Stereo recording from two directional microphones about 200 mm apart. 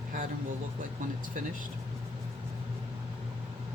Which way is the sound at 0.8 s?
45° right (ahead or behind).